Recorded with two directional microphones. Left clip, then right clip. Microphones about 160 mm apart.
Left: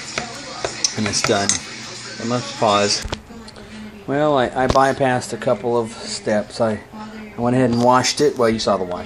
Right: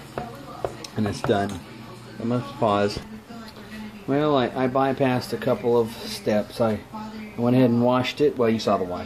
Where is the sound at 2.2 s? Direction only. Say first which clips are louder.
Left 5 dB; 15° left (ahead or behind).